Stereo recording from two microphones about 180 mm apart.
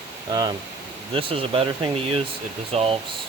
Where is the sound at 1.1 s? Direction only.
30° right (ahead or behind).